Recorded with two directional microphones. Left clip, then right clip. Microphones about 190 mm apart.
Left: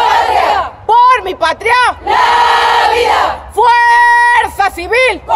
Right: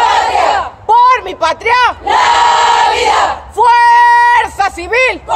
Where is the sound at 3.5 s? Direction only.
20° left (ahead or behind).